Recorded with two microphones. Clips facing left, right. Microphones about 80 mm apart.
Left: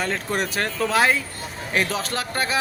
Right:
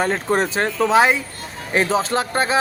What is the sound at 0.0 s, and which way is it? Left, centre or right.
Speech, right.